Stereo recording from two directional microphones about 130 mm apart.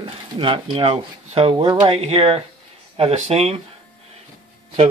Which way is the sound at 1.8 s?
50° right (ahead or behind).